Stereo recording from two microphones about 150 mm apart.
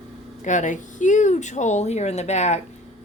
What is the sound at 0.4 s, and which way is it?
Speech, 55° left (ahead or behind).